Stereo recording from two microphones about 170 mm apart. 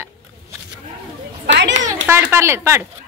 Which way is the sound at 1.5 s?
90° right.